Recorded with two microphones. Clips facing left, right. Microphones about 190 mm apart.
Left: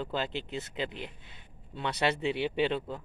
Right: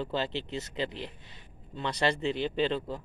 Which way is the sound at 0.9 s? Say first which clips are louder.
Right 1 dB; 55° left (ahead or behind).